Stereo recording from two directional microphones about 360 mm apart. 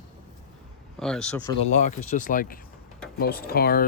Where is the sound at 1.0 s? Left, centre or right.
Centre.